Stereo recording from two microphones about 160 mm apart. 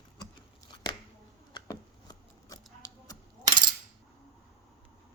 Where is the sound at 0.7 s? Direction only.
25° left (ahead or behind).